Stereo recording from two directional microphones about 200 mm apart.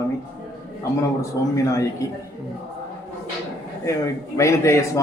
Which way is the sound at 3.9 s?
15° left (ahead or behind).